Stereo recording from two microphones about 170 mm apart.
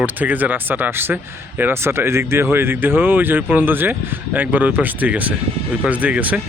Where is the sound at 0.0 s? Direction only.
10° right (ahead or behind).